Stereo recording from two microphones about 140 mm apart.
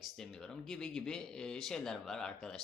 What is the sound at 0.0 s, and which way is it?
Speech, 5° left (ahead or behind).